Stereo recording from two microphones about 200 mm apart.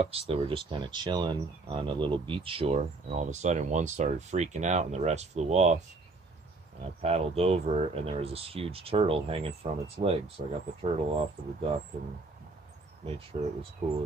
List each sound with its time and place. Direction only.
0.0 s speech: 30° right (ahead or behind)
6.8 s speech: 30° right (ahead or behind)
13.0 s speech: 30° right (ahead or behind)